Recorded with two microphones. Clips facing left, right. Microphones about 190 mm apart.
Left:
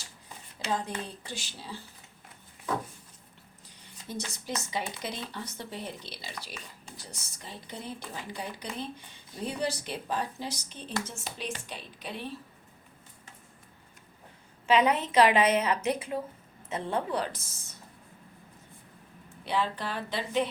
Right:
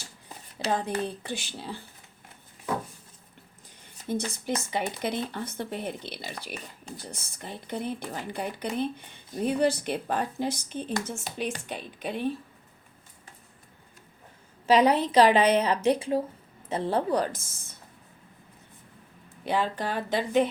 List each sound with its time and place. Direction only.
0.6 s speech: 60° right (ahead or behind)
4.1 s speech: 55° right (ahead or behind)
14.7 s a woman's voice: 35° right (ahead or behind)
19.5 s speech: 45° right (ahead or behind)